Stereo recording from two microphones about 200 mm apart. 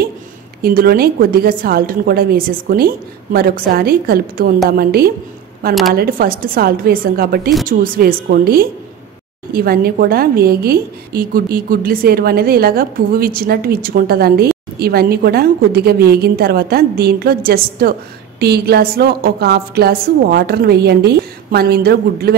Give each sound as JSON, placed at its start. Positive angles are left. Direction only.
{"t": 0.6, "sound": "a woman's voice", "side_deg": -50}